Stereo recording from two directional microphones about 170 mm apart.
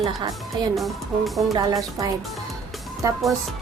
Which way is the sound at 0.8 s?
Centre (ahead or behind).